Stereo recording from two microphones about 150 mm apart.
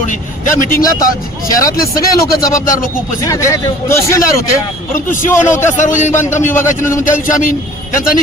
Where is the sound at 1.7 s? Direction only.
75° left (ahead or behind).